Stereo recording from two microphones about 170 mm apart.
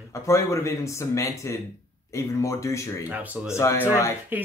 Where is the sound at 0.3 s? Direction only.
15° left (ahead or behind).